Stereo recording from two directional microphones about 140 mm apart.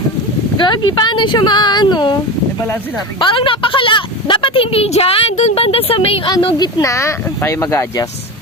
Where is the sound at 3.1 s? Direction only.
35° left (ahead or behind).